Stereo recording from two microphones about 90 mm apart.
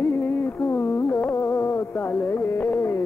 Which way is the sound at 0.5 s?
5° left (ahead or behind).